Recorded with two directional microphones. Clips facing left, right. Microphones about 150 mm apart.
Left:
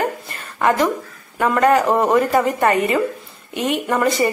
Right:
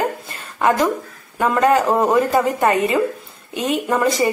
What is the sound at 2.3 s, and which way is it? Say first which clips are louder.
Speech: even; 15° right (ahead or behind).